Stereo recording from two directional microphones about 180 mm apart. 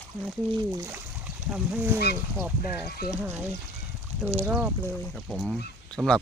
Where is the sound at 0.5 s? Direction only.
15° right (ahead or behind).